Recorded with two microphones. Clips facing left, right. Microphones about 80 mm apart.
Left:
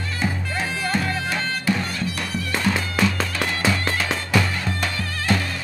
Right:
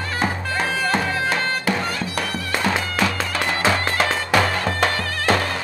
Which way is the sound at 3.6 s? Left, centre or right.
Right.